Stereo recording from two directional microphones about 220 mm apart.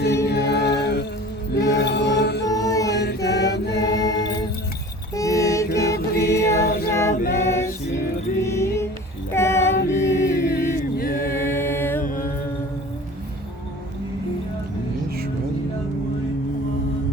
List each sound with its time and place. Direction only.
0.3 s music: 50° left (ahead or behind)
2.4 s music: 15° left (ahead or behind)
2.9 s mantra: 50° left (ahead or behind)
3.9 s music: 15° left (ahead or behind)
5.1 s mantra: 15° left (ahead or behind)
6.4 s a capella: 15° left (ahead or behind)
7.4 s music: 10° left (ahead or behind)
9.3 s female singing: 10° left (ahead or behind)
9.7 s music: 35° left (ahead or behind)
11.3 s music: 10° left (ahead or behind)
12.0 s mantra: 40° left (ahead or behind)